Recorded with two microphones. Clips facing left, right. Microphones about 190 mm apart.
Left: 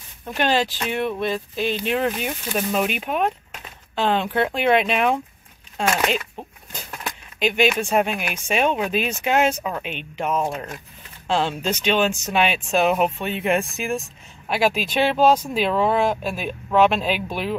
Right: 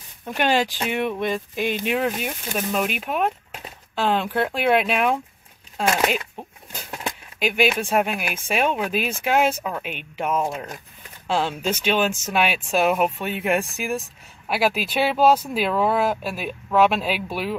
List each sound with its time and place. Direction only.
0.3 s speech: 10° right (ahead or behind)
6.9 s a sound: 25° right (ahead or behind)
7.3 s speech: 5° right (ahead or behind)